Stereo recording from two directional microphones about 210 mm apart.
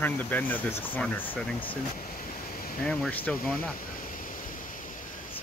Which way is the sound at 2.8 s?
5° left (ahead or behind).